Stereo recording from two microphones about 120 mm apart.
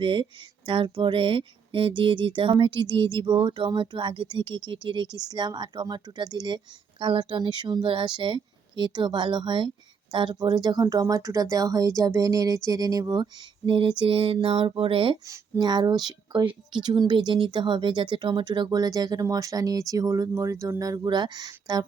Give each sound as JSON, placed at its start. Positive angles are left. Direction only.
{"t": 0.0, "sound": "a woman's voice", "side_deg": -45}
{"t": 15.3, "sound": "a woman's voice", "side_deg": -35}